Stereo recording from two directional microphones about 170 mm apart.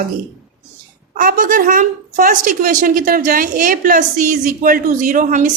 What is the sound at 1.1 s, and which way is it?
A woman's voice, 55° right (ahead or behind).